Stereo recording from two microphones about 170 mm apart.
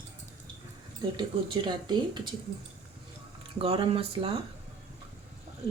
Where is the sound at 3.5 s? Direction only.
35° right (ahead or behind).